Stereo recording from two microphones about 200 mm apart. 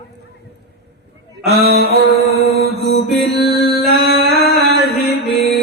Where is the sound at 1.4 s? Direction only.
55° right (ahead or behind).